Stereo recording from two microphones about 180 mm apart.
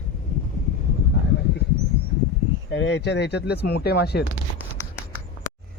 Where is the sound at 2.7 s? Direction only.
80° left; by 4.3 s 65° left (ahead or behind).